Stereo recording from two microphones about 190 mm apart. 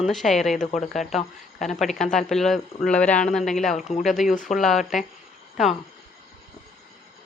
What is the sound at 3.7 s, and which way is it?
Speech, 40° left (ahead or behind).